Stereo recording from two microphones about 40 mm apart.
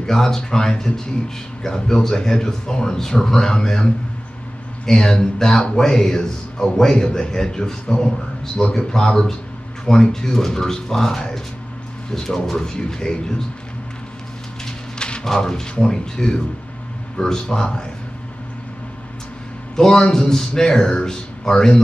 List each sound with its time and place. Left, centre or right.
0.0 s a man's voice: centre
15.0 s a sound: left
15.2 s a man's voice: centre
19.7 s a man's voice: centre